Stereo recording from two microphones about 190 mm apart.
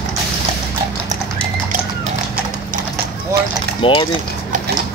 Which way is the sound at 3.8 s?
25° left (ahead or behind).